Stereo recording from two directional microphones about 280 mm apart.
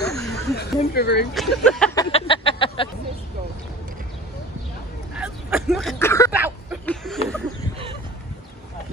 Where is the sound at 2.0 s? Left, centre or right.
Centre.